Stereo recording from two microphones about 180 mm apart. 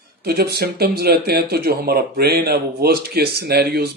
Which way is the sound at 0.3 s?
60° right (ahead or behind).